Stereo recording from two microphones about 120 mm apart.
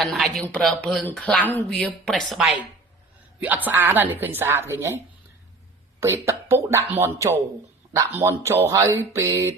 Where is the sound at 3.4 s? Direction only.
15° right (ahead or behind).